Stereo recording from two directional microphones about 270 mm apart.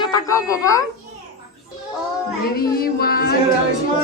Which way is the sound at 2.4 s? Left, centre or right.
Left.